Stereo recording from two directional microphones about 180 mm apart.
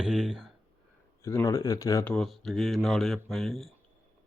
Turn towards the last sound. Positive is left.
turn(degrees=0)  # may be behind; listen again after turning